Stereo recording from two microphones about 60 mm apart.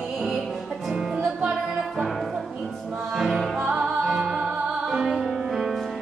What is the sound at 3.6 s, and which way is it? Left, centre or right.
Music, centre.